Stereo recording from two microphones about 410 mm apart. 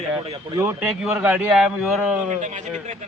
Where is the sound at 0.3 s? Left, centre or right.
Centre.